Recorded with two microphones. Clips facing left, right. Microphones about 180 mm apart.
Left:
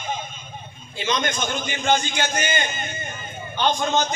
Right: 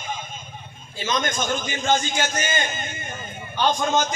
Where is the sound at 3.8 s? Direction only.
45° right (ahead or behind).